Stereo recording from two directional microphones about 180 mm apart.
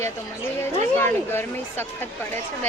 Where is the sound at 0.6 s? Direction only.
15° left (ahead or behind).